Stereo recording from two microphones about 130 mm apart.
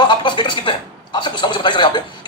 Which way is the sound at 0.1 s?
35° left (ahead or behind).